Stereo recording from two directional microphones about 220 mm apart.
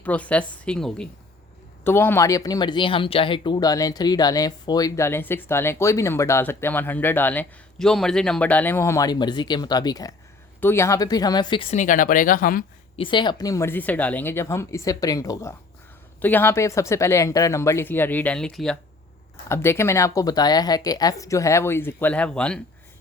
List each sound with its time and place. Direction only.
0.0 s a woman's voice: 5° left (ahead or behind); by 12.6 s 40° left (ahead or behind)
13.0 s speech: 20° left (ahead or behind); by 22.6 s 5° left (ahead or behind)